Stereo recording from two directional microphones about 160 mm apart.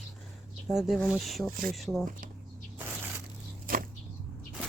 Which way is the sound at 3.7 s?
65° right (ahead or behind).